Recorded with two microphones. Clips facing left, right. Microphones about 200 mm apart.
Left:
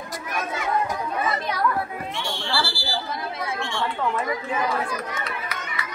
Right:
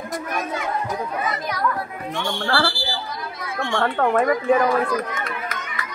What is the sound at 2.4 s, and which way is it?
Speech, 55° right (ahead or behind).